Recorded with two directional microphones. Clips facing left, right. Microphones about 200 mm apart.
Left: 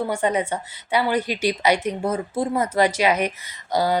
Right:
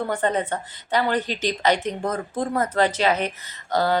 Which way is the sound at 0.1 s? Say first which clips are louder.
Left 1 dB; 10° left (ahead or behind).